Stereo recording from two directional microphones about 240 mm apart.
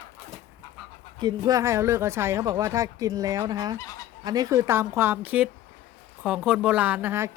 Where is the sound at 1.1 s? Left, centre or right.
Centre.